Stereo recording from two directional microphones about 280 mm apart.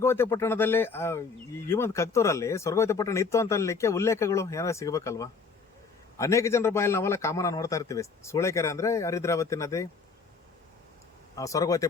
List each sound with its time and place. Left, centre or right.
0.0 s a man's voice: centre
11.3 s a man's voice: centre